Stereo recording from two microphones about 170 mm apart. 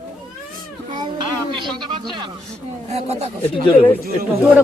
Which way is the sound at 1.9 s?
25° right (ahead or behind).